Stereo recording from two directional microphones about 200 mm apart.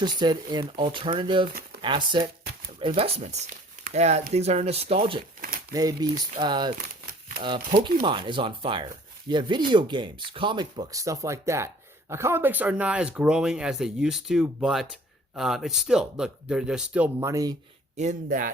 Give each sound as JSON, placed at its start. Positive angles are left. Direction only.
{"t": 0.0, "sound": "speech", "side_deg": -20}
{"t": 1.5, "sound": "a sound", "side_deg": -50}
{"t": 1.8, "sound": "speech", "side_deg": -20}
{"t": 8.0, "sound": "speech", "side_deg": -25}
{"t": 17.2, "sound": "speech", "side_deg": -15}
{"t": 17.9, "sound": "speech", "side_deg": -40}